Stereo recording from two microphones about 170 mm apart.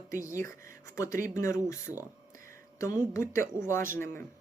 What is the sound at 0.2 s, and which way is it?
Speech, 20° left (ahead or behind).